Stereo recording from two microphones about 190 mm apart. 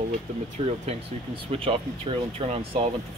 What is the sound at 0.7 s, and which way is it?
Speech, 30° right (ahead or behind).